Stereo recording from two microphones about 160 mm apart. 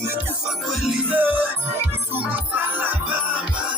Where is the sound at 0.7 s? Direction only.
5° right (ahead or behind).